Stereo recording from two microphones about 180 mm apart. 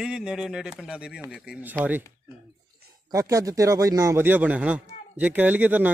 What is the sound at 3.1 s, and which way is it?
Speech, 20° right (ahead or behind).